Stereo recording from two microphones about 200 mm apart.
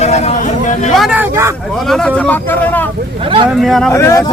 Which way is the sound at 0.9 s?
5° right (ahead or behind).